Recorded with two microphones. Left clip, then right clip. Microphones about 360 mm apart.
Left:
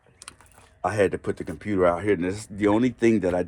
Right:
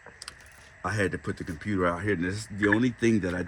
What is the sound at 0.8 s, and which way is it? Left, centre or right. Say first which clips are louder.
Speech: left 6 dB; centre.